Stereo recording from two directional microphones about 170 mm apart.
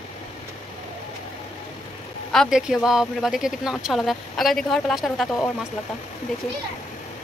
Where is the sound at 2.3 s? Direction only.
Centre (ahead or behind).